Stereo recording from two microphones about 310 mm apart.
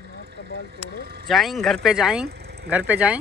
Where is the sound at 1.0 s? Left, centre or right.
Right.